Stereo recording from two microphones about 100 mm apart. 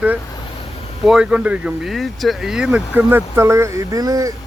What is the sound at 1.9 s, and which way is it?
Speech, centre (ahead or behind).